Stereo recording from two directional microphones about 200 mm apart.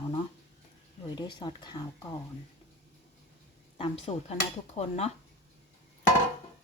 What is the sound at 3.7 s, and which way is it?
Speech, 30° left (ahead or behind).